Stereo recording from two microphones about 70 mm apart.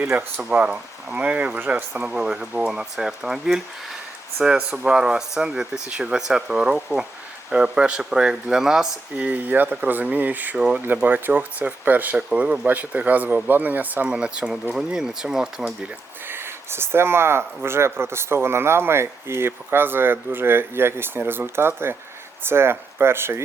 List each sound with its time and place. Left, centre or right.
0.4 s speech: centre
9.1 s speech: right
11.0 s speech: right
14.1 s speech: centre
16.3 s speech: right